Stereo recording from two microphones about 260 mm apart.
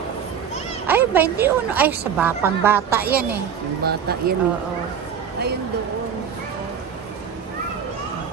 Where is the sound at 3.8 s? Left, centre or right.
Right.